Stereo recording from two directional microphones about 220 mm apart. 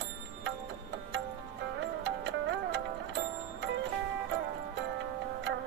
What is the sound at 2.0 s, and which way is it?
Music, 60° right (ahead or behind).